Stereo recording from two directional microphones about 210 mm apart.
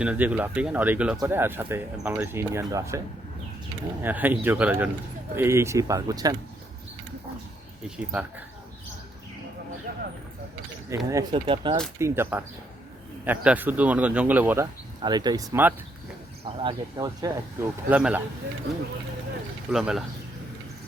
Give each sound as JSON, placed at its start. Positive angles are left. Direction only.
{"t": 0.0, "sound": "speech", "side_deg": -5}
{"t": 4.0, "sound": "speech", "side_deg": -10}
{"t": 7.9, "sound": "speech", "side_deg": -5}
{"t": 10.8, "sound": "speech", "side_deg": -15}
{"t": 11.9, "sound": "speech", "side_deg": -10}
{"t": 19.7, "sound": "speech", "side_deg": 0}